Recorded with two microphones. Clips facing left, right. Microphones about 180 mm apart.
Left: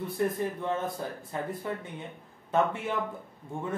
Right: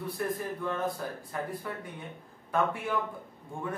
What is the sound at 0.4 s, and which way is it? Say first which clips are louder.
Speech: left 2 dB; 20° left (ahead or behind).